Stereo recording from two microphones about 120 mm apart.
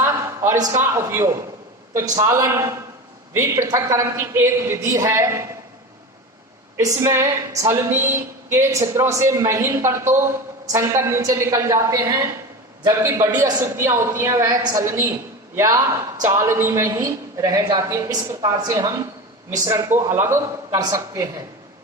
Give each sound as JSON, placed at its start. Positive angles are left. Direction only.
{"t": 0.0, "sound": "a sound", "side_deg": -25}
{"t": 0.8, "sound": "a woman's voice", "side_deg": -20}
{"t": 6.7, "sound": "a woman's voice", "side_deg": -20}